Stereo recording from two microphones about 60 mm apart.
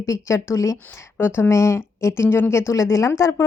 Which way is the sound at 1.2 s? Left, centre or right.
Left.